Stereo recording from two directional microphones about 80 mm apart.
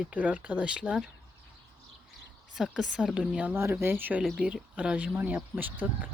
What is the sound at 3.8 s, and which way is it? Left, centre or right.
Speech, right.